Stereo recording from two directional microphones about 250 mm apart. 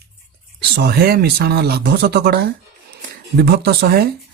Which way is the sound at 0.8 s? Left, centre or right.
Right.